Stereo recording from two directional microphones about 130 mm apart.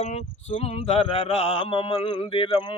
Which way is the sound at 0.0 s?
55° left (ahead or behind).